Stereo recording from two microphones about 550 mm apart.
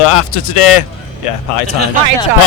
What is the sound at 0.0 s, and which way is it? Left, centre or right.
Speech, left.